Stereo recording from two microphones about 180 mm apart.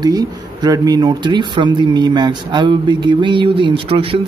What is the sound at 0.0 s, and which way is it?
Speech, 20° right (ahead or behind).